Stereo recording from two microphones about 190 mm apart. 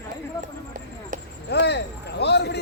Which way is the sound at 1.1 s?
45° right (ahead or behind).